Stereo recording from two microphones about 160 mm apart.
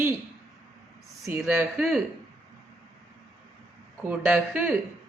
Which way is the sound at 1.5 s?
10° right (ahead or behind).